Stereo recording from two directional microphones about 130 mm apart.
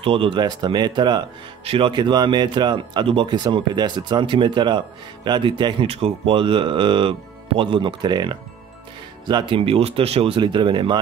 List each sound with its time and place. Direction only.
0.0 s speech: 45° right (ahead or behind)
1.6 s speech: 45° right (ahead or behind)